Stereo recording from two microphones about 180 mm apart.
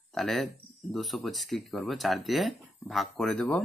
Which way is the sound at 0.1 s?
Centre (ahead or behind).